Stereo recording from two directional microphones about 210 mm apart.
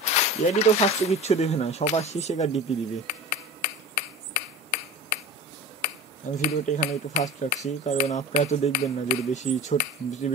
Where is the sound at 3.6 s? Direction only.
35° left (ahead or behind).